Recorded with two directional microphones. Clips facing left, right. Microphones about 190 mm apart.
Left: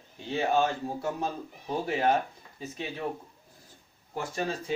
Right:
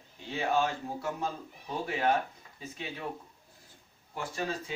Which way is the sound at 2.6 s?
35° left (ahead or behind).